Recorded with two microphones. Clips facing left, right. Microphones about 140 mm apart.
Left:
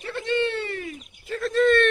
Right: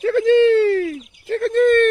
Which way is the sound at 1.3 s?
55° right (ahead or behind).